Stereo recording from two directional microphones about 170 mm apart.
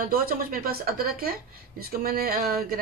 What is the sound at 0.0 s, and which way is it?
A woman's voice, 60° right (ahead or behind).